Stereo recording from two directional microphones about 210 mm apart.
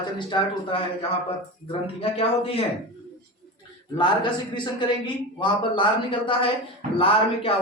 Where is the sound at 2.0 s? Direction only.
25° left (ahead or behind).